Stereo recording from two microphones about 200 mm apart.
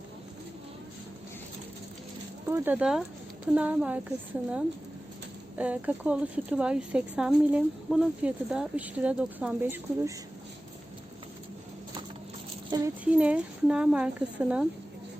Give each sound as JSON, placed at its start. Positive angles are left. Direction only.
{"t": 2.5, "sound": "speech", "side_deg": -5}
{"t": 5.5, "sound": "speech", "side_deg": -5}
{"t": 12.7, "sound": "speech", "side_deg": -20}
{"t": 13.1, "sound": "speech", "side_deg": -5}